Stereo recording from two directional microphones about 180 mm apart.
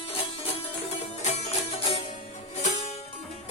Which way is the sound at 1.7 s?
35° left (ahead or behind).